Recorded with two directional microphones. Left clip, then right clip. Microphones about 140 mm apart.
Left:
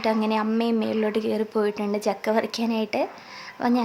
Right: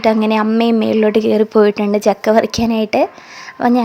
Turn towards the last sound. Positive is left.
turn(degrees=-45)  # may be behind; listen again after turning